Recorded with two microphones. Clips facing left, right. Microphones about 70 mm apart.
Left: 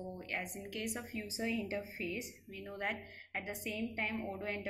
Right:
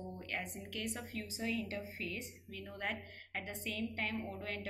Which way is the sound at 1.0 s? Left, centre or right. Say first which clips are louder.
Left 1 dB; centre.